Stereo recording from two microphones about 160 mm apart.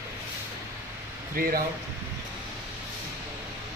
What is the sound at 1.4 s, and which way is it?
Speech, 65° right (ahead or behind).